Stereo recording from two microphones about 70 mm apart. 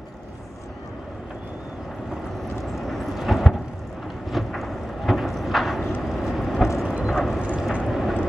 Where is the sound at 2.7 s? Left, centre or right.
Centre.